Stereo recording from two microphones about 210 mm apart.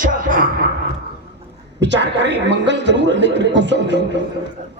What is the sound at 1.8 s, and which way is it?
A man's voice, 55° right (ahead or behind).